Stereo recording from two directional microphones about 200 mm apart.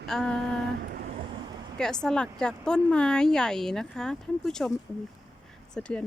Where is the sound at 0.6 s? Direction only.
50° right (ahead or behind).